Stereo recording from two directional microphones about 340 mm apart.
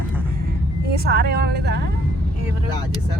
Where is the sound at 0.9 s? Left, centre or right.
Right.